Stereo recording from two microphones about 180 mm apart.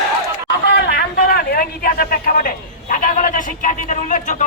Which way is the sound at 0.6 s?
65° left (ahead or behind).